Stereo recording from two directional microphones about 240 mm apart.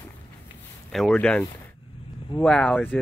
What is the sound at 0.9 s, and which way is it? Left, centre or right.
Speech, centre.